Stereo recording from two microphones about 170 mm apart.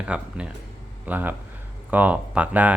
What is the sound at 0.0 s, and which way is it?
Speech, 5° right (ahead or behind).